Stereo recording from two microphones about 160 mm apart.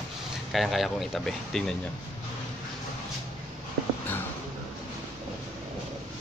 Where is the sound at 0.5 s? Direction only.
Centre (ahead or behind).